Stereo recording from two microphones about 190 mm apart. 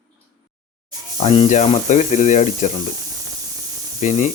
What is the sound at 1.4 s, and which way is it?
Speech, 40° left (ahead or behind).